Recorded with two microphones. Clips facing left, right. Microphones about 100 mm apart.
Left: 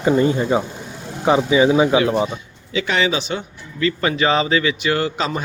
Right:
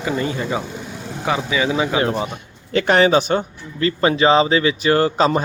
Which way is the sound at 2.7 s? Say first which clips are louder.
Right 6 dB; 55° right (ahead or behind).